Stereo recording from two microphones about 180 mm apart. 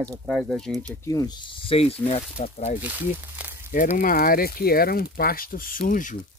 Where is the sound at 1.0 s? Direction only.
20° left (ahead or behind).